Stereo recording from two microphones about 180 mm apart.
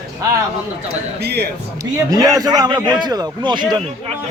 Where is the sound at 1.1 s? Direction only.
65° right (ahead or behind).